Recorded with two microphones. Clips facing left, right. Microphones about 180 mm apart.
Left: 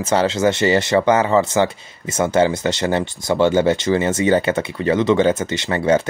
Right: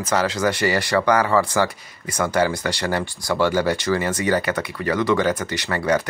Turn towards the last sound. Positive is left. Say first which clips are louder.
# left 4 dB
turn(degrees=25)  # may be behind; listen again after turning